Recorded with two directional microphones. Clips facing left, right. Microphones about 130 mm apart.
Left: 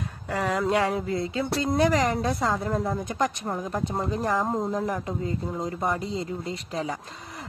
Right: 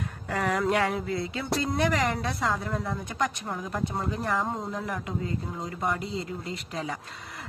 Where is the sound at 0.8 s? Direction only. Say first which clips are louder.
Left 2 dB; 35° left (ahead or behind).